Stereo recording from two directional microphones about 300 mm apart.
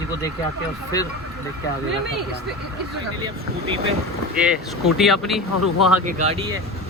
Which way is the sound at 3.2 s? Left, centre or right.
Centre.